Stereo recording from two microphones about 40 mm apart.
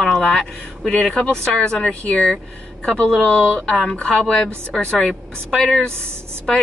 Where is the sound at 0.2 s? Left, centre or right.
Centre.